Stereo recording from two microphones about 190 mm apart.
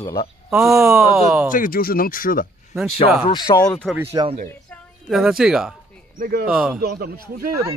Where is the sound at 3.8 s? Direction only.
Centre (ahead or behind).